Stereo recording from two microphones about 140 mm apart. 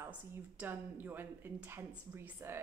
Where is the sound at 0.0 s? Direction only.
15° right (ahead or behind).